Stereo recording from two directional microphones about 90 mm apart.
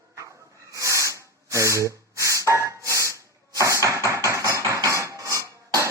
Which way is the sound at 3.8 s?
35° right (ahead or behind).